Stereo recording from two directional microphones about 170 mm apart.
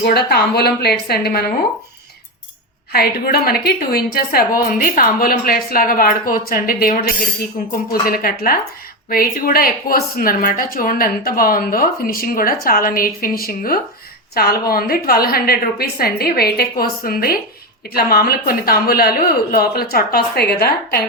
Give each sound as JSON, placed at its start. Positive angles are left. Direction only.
{"t": 0.0, "sound": "a woman's voice", "side_deg": 65}
{"t": 2.9, "sound": "speech", "side_deg": 65}